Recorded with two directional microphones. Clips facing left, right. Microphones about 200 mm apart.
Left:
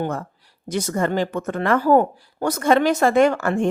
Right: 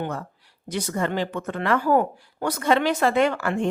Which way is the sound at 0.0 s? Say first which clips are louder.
Left 4 dB; 45° left (ahead or behind).